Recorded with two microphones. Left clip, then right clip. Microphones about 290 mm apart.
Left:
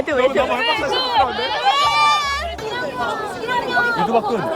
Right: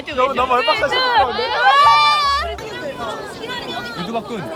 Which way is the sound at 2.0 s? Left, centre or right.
Centre.